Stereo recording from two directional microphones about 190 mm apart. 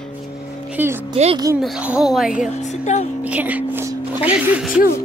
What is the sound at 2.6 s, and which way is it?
Speech, 40° left (ahead or behind).